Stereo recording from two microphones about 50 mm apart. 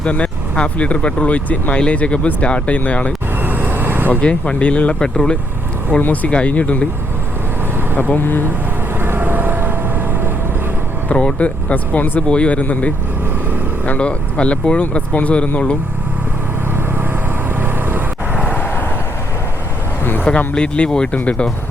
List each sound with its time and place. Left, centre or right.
0.0 s speech: left
3.4 s vehicle: right
4.2 s speech: left
6.0 s speech: left
8.1 s speech: left
9.0 s vehicle: right
11.1 s speech: left
14.0 s speech: left
17.5 s vehicle: right
18.6 s vehicle: left
20.5 s speech: left